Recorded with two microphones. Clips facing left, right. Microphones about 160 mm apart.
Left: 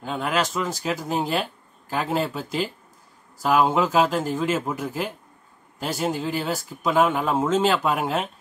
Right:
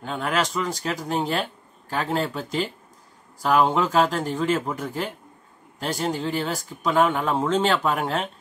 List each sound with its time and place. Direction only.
0.0 s speech: centre (ahead or behind)